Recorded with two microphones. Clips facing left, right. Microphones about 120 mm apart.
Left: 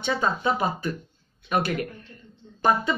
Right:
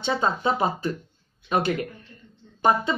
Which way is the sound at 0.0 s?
25° right (ahead or behind).